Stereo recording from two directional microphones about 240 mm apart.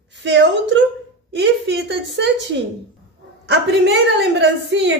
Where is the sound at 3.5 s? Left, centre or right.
Right.